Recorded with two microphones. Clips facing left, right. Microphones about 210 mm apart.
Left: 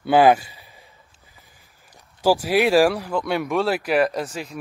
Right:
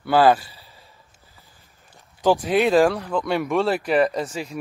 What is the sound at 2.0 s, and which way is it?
Speech, 5° left (ahead or behind).